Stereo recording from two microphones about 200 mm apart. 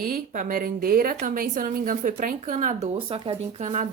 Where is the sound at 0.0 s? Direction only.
45° right (ahead or behind).